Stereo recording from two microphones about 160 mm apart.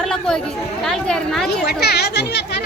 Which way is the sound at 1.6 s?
90° left.